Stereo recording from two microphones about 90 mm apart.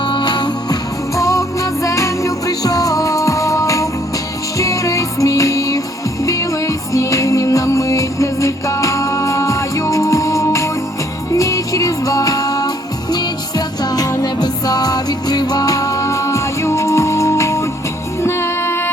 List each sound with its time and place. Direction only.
0.0 s music: 55° left (ahead or behind)
1.1 s music: 35° left (ahead or behind)